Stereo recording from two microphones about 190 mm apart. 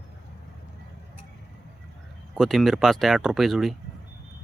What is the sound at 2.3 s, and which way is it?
Speech, centre (ahead or behind).